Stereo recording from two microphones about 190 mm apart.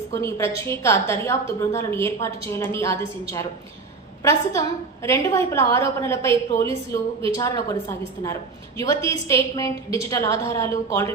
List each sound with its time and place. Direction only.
0.1 s a woman's voice: 15° left (ahead or behind)